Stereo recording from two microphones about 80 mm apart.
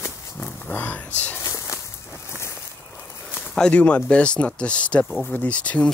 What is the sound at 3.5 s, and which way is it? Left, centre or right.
Speech, centre.